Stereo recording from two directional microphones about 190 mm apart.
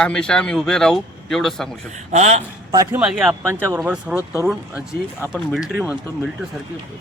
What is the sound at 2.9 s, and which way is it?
Speech, 5° right (ahead or behind).